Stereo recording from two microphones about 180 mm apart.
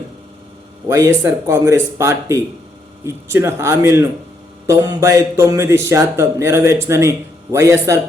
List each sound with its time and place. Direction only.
0.9 s speech: 15° right (ahead or behind)